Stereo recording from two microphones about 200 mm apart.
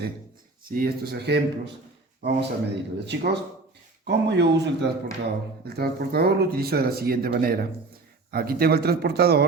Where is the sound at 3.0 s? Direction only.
55° right (ahead or behind).